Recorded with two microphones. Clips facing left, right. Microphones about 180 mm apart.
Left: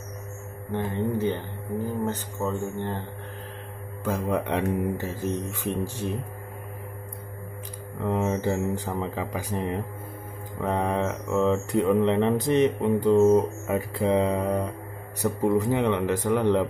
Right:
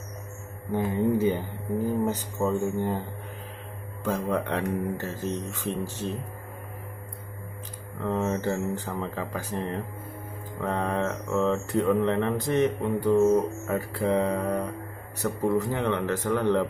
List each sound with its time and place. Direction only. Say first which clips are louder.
0.7 s speech: right 3 dB; 10° right (ahead or behind)
4.0 s speech: left 1 dB; 10° left (ahead or behind)
8.0 s speech: left 1 dB; 15° left (ahead or behind)